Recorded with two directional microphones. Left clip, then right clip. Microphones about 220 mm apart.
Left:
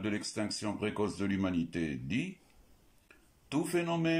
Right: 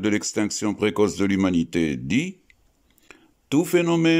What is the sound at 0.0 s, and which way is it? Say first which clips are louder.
Speech: right 12 dB; 50° right (ahead or behind).